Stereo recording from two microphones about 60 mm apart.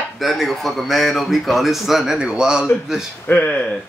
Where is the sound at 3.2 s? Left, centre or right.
Left.